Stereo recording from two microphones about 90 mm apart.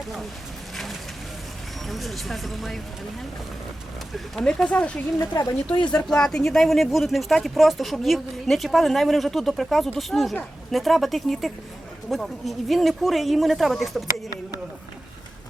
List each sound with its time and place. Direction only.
1.9 s speech: centre (ahead or behind)
4.4 s speech: 10° left (ahead or behind)
5.3 s speech: 40° left (ahead or behind)
5.7 s speech: 60° left (ahead or behind)
6.1 s speech: 5° left (ahead or behind)